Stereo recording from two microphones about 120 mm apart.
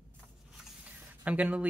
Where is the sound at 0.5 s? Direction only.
10° right (ahead or behind).